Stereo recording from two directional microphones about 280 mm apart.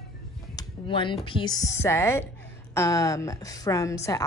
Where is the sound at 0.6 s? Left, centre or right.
Centre.